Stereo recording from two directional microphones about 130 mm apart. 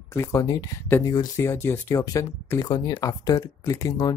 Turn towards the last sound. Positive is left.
turn(degrees=25)  # may be behind; listen again after turning